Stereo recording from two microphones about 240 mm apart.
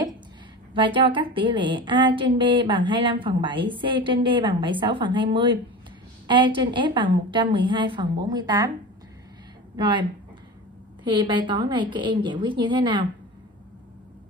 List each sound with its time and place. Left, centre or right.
0.7 s a woman's voice: right
9.8 s a woman's voice: centre
11.1 s a woman's voice: centre